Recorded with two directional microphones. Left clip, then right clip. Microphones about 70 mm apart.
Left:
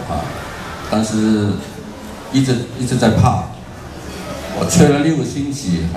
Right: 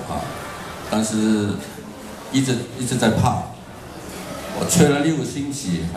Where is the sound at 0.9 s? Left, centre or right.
Right.